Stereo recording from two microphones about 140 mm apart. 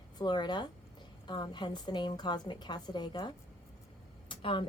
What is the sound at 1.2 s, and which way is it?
A woman's voice, 30° left (ahead or behind).